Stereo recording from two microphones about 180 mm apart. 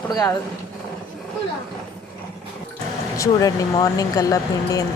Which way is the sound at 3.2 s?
20° left (ahead or behind).